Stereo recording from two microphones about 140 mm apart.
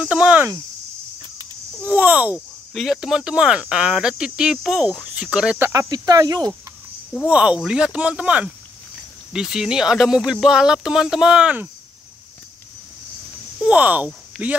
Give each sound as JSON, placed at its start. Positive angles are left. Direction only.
{"t": 0.0, "sound": "cricket", "side_deg": -10}
{"t": 1.8, "sound": "speech", "side_deg": -10}
{"t": 5.6, "sound": "cricket", "side_deg": -25}
{"t": 7.1, "sound": "speech", "side_deg": -5}
{"t": 13.6, "sound": "speech", "side_deg": -10}